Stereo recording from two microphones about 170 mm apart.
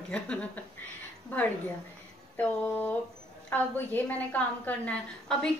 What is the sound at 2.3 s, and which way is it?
A woman's voice, 10° left (ahead or behind).